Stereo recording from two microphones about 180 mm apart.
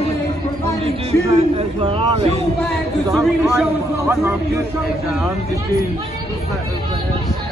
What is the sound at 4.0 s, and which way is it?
Speech, 15° right (ahead or behind).